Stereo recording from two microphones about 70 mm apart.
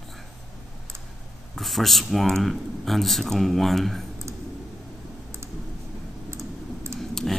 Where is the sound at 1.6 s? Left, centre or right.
Centre.